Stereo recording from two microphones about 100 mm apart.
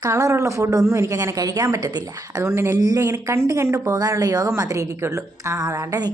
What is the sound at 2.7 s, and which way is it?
Speech, 35° right (ahead or behind).